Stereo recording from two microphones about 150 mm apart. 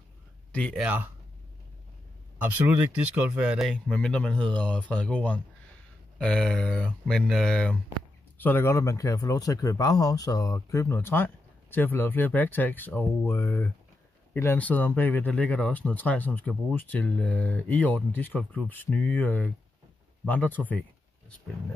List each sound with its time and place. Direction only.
0.5 s speech: 10° left (ahead or behind)
0.7 s speech: 10° right (ahead or behind)
2.4 s speech: 10° right (ahead or behind); by 20.8 s 10° left (ahead or behind)